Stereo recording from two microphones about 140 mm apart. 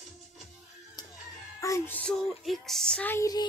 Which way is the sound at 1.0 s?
30° left (ahead or behind).